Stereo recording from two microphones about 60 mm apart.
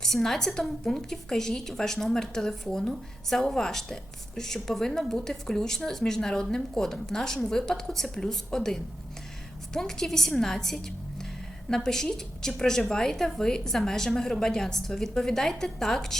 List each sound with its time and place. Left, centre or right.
0.0 s a woman's voice: centre